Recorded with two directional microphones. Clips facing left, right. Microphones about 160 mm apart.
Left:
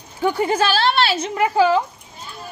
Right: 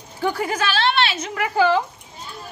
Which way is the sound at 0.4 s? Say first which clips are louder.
Left 6 dB; 30° left (ahead or behind).